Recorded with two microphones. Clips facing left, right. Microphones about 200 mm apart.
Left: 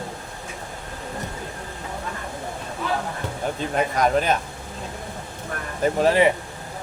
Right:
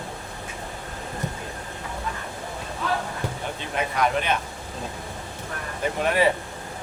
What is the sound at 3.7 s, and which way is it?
Speech, 40° left (ahead or behind).